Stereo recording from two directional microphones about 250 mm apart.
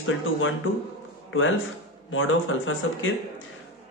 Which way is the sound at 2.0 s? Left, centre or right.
Left.